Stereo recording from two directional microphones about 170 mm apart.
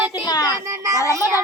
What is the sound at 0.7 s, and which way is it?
Speech, 20° right (ahead or behind).